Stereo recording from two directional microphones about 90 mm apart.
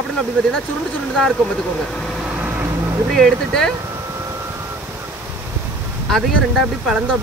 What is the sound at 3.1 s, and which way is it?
Speech, 5° left (ahead or behind).